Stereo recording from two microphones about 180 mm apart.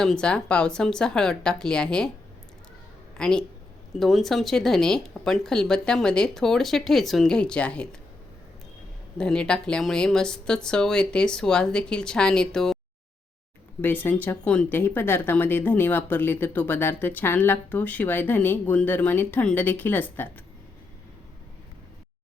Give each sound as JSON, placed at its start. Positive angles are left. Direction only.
{"t": 0.0, "sound": "speech", "side_deg": 5}
{"t": 3.2, "sound": "speech", "side_deg": 5}
{"t": 9.1, "sound": "speech", "side_deg": 5}
{"t": 13.8, "sound": "speech", "side_deg": 10}